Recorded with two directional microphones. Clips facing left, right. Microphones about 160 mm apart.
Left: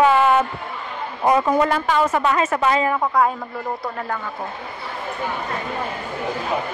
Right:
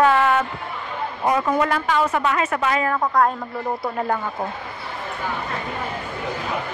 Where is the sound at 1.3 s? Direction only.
30° left (ahead or behind).